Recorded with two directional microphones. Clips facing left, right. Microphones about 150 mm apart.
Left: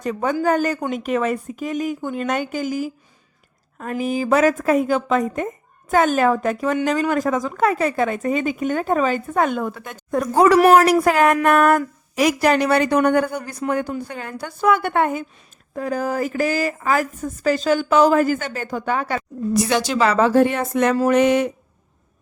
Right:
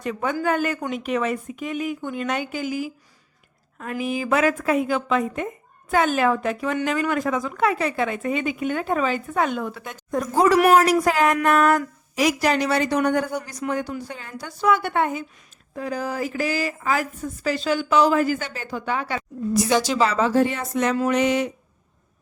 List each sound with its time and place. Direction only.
0.0 s a woman's voice: 40° left (ahead or behind)
19.5 s a woman's voice: 60° left (ahead or behind)
20.9 s a woman's voice: 45° left (ahead or behind)